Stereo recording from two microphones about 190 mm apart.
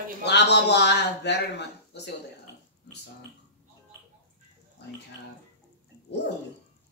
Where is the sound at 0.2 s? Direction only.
65° left (ahead or behind).